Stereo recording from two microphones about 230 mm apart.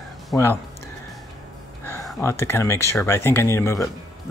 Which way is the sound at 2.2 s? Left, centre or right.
Centre.